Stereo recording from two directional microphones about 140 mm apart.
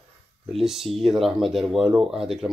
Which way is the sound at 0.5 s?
Centre (ahead or behind).